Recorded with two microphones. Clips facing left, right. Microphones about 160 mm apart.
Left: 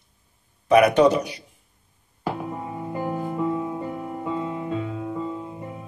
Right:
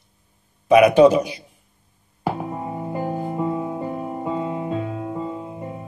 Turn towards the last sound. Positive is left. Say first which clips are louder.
# right 1 dB
turn(degrees=-10)  # may be behind; listen again after turning